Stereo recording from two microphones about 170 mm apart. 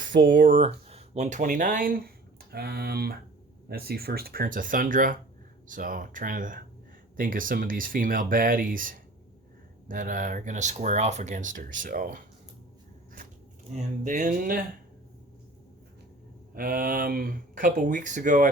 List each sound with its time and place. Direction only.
0.0 s speech: 50° right (ahead or behind)
13.7 s speech: 50° right (ahead or behind)
16.6 s speech: 55° right (ahead or behind)